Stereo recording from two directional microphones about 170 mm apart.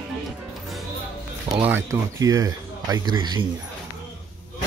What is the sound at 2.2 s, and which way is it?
Speech, 20° right (ahead or behind).